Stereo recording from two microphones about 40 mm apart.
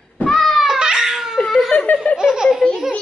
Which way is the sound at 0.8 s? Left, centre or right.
Centre.